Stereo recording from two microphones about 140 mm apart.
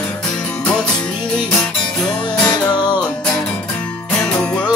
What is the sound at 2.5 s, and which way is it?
Music, 30° left (ahead or behind).